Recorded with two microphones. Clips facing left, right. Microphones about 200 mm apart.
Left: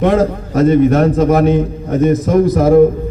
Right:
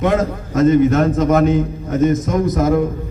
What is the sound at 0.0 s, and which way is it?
A man's voice, 30° left (ahead or behind).